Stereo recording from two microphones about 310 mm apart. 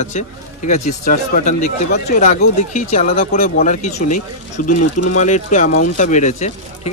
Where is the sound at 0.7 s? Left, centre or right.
Left.